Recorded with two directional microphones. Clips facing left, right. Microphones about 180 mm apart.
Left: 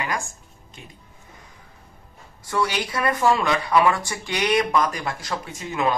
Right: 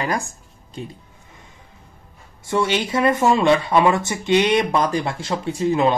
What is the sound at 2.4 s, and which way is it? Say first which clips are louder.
Speech: right 4 dB; 25° right (ahead or behind).